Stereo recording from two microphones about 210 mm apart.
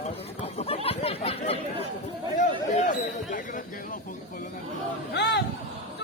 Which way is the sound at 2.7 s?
35° left (ahead or behind).